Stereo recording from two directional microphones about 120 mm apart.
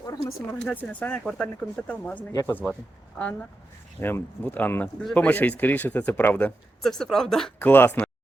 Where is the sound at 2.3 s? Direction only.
30° left (ahead or behind).